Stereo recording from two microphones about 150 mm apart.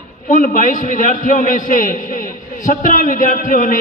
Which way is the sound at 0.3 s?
65° left (ahead or behind).